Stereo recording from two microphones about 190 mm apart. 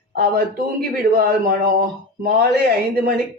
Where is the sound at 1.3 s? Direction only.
50° right (ahead or behind).